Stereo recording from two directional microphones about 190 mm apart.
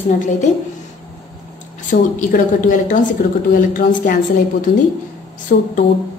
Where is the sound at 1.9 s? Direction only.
45° left (ahead or behind).